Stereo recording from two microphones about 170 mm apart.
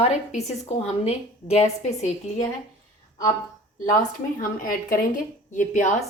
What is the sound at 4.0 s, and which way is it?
Speech, 55° left (ahead or behind).